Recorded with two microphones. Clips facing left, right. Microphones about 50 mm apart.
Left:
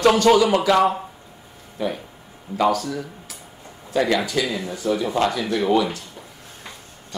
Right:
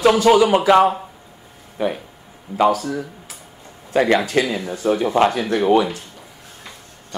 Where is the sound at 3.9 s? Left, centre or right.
Right.